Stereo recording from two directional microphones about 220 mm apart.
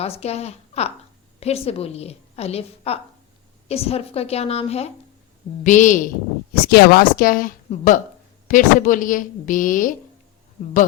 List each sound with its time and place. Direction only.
0.0 s a woman's voice: 30° left (ahead or behind)
6.5 s a woman's voice: 45° left (ahead or behind)